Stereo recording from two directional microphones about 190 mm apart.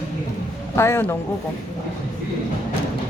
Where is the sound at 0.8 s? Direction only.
15° left (ahead or behind).